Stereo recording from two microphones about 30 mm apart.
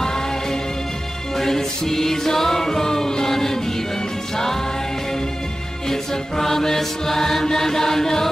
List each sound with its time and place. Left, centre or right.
0.0 s music: centre
5.9 s mantra: centre